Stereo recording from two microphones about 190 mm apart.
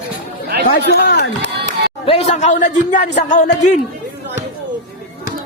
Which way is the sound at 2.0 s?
30° left (ahead or behind).